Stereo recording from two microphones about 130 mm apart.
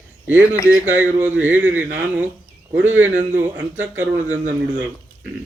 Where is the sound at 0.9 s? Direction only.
15° right (ahead or behind).